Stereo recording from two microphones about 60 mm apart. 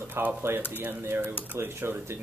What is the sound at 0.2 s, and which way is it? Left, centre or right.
Speech, right.